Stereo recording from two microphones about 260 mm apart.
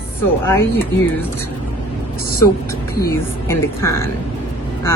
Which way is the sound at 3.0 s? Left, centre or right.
Centre.